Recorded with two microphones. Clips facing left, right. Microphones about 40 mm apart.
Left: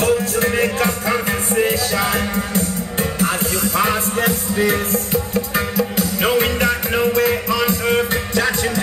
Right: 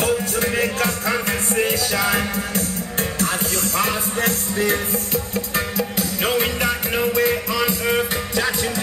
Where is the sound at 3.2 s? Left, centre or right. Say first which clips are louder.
Left 4 dB; centre.